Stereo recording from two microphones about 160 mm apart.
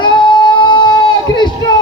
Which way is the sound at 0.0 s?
30° left (ahead or behind).